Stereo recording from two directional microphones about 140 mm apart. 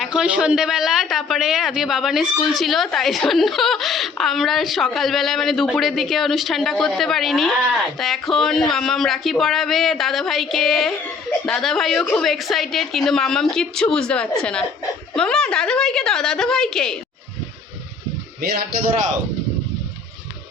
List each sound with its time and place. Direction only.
0.0 s speech: 5° right (ahead or behind)
18.3 s a man's voice: 90° right